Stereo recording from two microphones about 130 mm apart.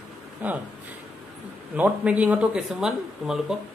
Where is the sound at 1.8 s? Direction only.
10° right (ahead or behind).